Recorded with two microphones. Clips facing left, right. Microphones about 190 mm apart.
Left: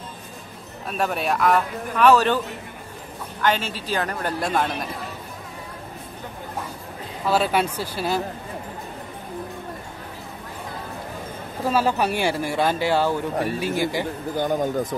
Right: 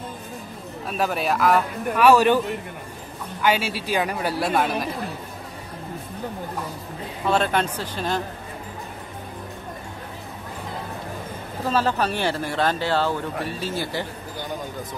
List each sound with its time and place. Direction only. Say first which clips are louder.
0.8 s a man's voice: even; centre (ahead or behind)
7.2 s speech: left 1 dB; 5° left (ahead or behind)
11.6 s speech: left 1 dB; 10° left (ahead or behind)
14.3 s speech: left 11 dB; 50° left (ahead or behind)